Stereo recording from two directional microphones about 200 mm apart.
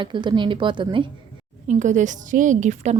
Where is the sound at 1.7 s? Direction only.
35° right (ahead or behind).